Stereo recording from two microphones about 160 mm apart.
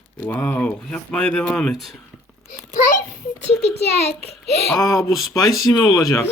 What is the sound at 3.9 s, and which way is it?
Speech, 40° left (ahead or behind).